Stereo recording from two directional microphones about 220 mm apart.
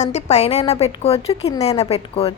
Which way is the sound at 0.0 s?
30° left (ahead or behind).